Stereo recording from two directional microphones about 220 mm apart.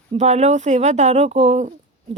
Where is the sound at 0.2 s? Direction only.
30° right (ahead or behind).